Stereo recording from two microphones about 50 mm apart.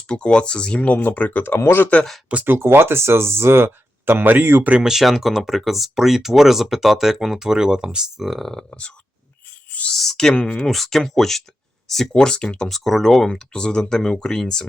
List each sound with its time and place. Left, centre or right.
0.1 s speech: centre
0.9 s speech: left
1.5 s speech: left
2.5 s speech: right
4.8 s speech: centre
8.3 s speech: centre
9.9 s speech: centre
10.7 s speech: centre
12.1 s speech: centre
12.6 s speech: centre